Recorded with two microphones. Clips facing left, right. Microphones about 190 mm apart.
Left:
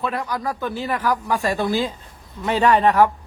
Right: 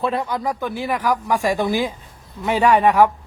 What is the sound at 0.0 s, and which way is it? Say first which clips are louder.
A man's voice: right 3 dB; 25° right (ahead or behind).